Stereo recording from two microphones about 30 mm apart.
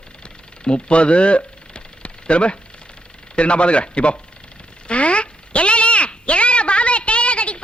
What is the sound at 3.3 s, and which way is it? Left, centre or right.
Speech, left.